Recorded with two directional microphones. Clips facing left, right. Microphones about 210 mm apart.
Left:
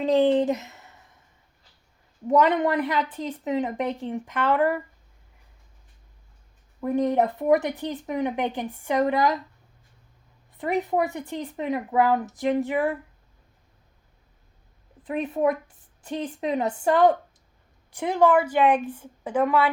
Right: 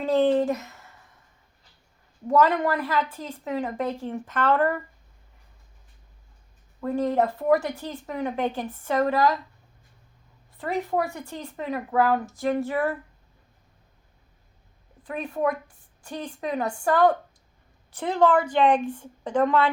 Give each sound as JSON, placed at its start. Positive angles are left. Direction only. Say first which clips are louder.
{"t": 0.0, "sound": "a sound", "louder": "left 1 dB", "side_deg": 15}
{"t": 2.2, "sound": "speech", "louder": "left 1 dB", "side_deg": 20}
{"t": 6.8, "sound": "speech", "louder": "left 1 dB", "side_deg": 20}
{"t": 10.6, "sound": "speech", "louder": "left 2 dB", "side_deg": 20}
{"t": 15.0, "sound": "a woman's voice", "louder": "left 3 dB", "side_deg": 20}